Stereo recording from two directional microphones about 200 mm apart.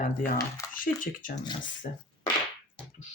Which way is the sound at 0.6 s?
15° left (ahead or behind).